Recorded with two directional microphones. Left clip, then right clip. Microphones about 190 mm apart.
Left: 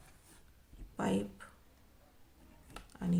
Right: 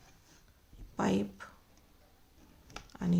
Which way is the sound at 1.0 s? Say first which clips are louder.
Right 3 dB; 30° right (ahead or behind).